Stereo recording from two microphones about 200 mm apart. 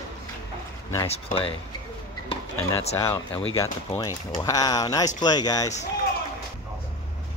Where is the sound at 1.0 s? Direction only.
30° left (ahead or behind).